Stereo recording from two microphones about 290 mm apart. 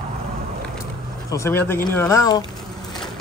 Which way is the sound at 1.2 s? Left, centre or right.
Centre.